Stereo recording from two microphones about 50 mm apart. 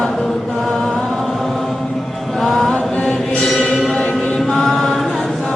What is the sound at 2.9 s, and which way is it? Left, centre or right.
Mantra, centre.